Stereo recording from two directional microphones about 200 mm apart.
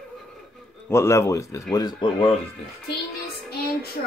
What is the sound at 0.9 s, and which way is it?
Speech, 15° left (ahead or behind).